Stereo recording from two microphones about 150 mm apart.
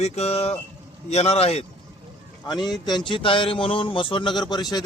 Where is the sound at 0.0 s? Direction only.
45° left (ahead or behind).